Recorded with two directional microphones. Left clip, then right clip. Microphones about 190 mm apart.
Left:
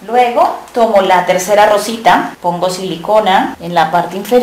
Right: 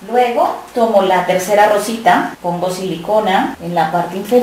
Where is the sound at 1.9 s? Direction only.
5° left (ahead or behind).